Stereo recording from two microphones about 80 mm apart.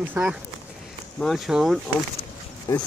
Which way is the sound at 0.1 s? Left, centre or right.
Centre.